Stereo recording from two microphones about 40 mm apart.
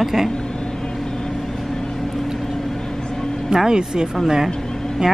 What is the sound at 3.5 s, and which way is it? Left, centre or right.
Speech, centre.